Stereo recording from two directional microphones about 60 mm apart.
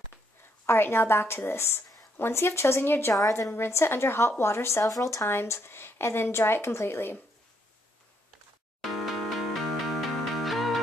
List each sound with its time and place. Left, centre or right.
0.7 s a woman's voice: left
4.8 s speech: left
5.2 s speech: left
9.5 s music: centre